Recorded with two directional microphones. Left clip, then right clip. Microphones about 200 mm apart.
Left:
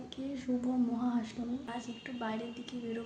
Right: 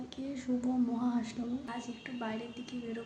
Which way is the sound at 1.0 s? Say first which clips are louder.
Even; centre (ahead or behind).